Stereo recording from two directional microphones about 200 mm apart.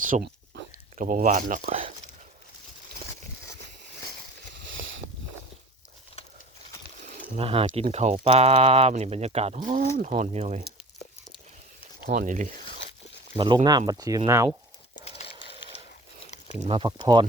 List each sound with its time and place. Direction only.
0.0 s a sound: 50° right (ahead or behind)
0.9 s speech: 40° right (ahead or behind)
4.5 s boat: 70° right (ahead or behind)
7.3 s speech: 30° right (ahead or behind)
12.0 s speech: 40° right (ahead or behind)
13.3 s speech: 20° right (ahead or behind)
15.0 s a sound: 30° left (ahead or behind)
16.6 s speech: 25° right (ahead or behind)